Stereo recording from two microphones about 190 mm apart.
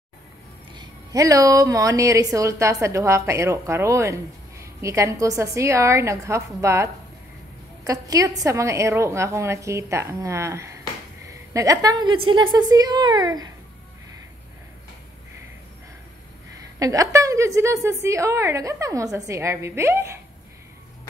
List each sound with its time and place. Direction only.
0.7 s a woman's voice: 20° right (ahead or behind)
16.5 s a woman's voice: 20° right (ahead or behind)